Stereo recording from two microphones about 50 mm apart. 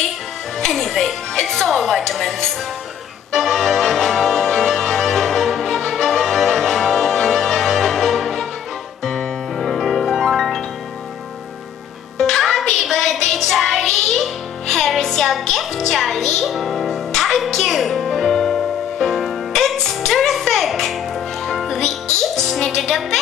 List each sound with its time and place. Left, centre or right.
0.6 s speech: centre
3.3 s music: centre
12.2 s music: centre